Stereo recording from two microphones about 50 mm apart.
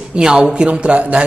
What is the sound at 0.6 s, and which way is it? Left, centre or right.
Speech, right.